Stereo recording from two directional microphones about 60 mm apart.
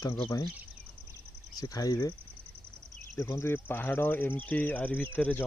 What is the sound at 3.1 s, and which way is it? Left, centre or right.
Speech, left.